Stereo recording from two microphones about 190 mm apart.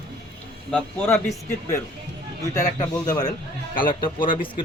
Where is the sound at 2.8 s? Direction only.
20° left (ahead or behind).